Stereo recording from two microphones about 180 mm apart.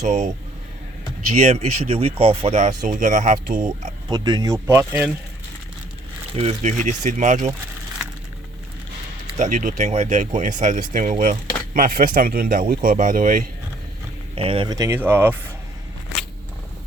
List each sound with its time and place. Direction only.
0.0 s speech: 40° right (ahead or behind)
1.3 s speech: 35° right (ahead or behind)
4.1 s speech: 25° right (ahead or behind)
6.3 s speech: 35° right (ahead or behind)
9.4 s speech: 45° right (ahead or behind)
14.3 s speech: 30° right (ahead or behind); by 15.4 s 10° right (ahead or behind)